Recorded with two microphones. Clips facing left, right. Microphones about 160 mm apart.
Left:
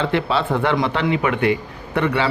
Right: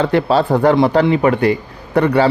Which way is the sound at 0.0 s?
40° right (ahead or behind).